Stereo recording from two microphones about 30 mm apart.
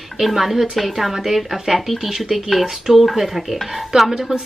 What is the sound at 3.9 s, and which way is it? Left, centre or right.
Speech, centre.